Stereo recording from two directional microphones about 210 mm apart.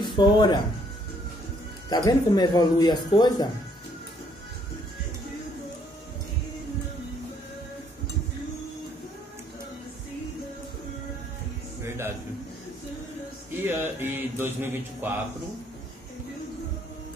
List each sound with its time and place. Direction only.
0.0 s speech: 20° left (ahead or behind)
1.9 s speech: 20° left (ahead or behind)
13.5 s speech: 10° right (ahead or behind)